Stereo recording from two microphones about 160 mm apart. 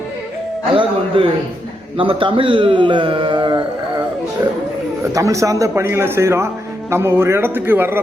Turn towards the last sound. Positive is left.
turn(degrees=-15)  # may be behind; listen again after turning